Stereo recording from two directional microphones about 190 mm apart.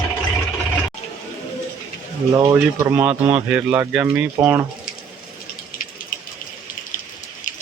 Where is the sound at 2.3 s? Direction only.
15° right (ahead or behind).